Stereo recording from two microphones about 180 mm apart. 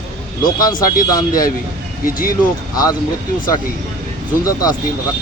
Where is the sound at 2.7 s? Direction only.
20° left (ahead or behind).